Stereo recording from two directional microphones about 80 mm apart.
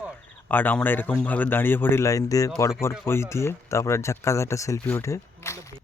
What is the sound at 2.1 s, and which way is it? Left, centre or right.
Speech, left.